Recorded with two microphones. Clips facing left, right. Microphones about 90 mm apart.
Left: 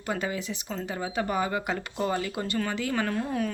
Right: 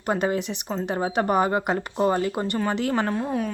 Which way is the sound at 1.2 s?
50° right (ahead or behind).